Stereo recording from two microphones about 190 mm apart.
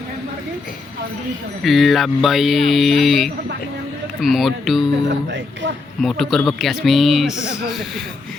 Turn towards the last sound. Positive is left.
turn(degrees=-5)  # may be behind; listen again after turning